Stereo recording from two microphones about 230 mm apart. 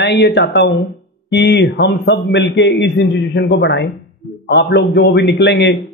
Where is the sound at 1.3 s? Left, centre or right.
Left.